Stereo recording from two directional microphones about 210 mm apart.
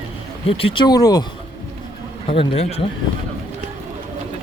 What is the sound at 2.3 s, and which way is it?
Speech, 25° left (ahead or behind).